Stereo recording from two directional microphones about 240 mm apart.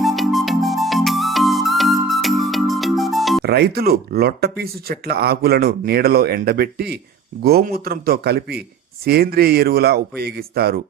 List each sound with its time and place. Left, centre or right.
0.0 s music: centre
3.4 s speech: right